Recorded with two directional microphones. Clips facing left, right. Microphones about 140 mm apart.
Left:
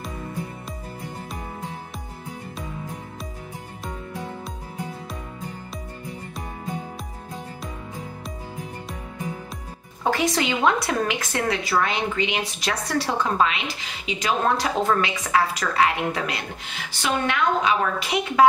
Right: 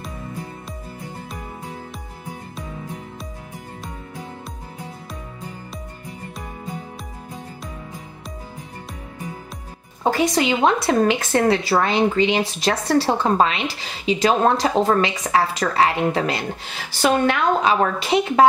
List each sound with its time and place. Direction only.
10.0 s a woman's voice: 30° right (ahead or behind)